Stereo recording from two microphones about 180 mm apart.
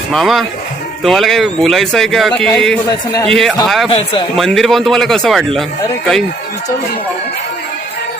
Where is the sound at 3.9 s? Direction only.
30° left (ahead or behind).